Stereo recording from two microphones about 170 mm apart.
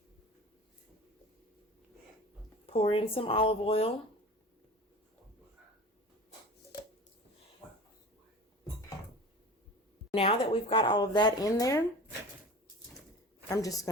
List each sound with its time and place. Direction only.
2.6 s speech: 35° left (ahead or behind)
10.1 s speech: 35° left (ahead or behind)
13.5 s speech: 20° left (ahead or behind)